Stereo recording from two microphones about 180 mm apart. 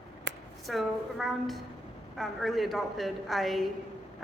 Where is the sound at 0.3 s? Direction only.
85° right.